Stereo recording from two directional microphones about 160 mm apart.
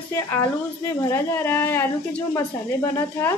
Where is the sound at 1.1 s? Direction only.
15° left (ahead or behind).